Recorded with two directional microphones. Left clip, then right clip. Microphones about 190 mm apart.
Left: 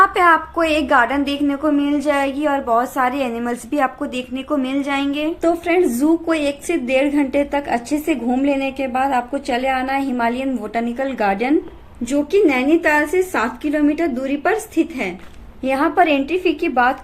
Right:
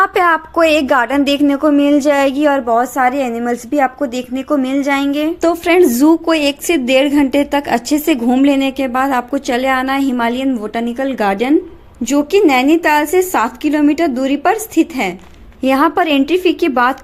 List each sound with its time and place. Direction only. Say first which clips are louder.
0.0 s a woman's voice: right 1 dB; 35° right (ahead or behind)
2.6 s a woman's voice: right 4 dB; 20° right (ahead or behind)
5.4 s a woman's voice: right 6 dB; 50° right (ahead or behind)